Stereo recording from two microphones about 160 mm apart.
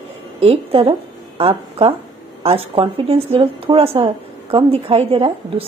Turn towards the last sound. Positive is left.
turn(degrees=-40)  # may be behind; listen again after turning